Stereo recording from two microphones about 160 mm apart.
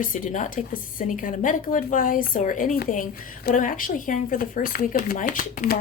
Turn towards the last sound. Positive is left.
turn(degrees=55)  # may be behind; listen again after turning